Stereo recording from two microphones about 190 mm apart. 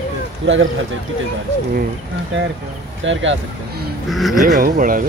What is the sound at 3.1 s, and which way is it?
Speech, 85° right.